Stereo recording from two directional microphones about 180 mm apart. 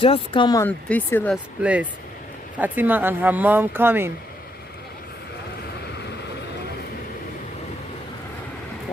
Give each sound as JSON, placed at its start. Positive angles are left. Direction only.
{"t": 0.0, "sound": "speech", "side_deg": 30}
{"t": 0.7, "sound": "speech", "side_deg": 10}
{"t": 1.6, "sound": "speech", "side_deg": -5}